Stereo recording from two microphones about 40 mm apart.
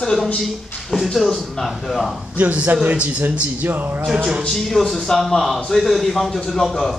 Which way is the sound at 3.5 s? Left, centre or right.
Right.